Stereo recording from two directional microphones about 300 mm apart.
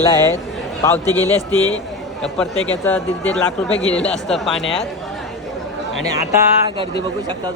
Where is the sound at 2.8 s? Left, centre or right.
Centre.